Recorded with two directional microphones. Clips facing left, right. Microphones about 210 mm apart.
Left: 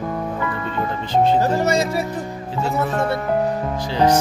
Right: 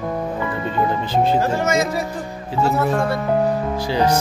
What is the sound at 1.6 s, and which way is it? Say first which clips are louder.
Speech: even; 30° left (ahead or behind).